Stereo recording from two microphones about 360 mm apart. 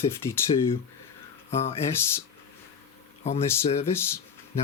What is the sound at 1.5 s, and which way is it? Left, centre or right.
Speech, centre.